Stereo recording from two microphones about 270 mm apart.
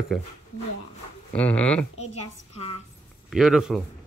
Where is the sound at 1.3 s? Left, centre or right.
Centre.